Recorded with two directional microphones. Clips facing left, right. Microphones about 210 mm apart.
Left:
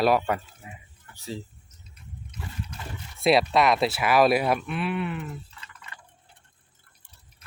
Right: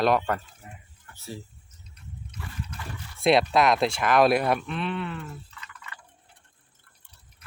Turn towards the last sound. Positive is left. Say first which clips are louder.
# right 2 dB
turn(degrees=25)  # may be behind; listen again after turning